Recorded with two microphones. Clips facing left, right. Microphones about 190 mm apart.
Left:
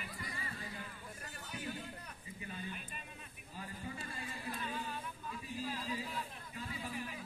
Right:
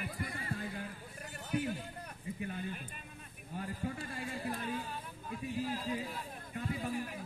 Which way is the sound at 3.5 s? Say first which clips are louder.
Right 7 dB; 55° right (ahead or behind).